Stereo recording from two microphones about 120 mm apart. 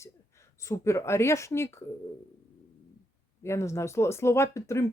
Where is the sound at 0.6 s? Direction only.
25° left (ahead or behind).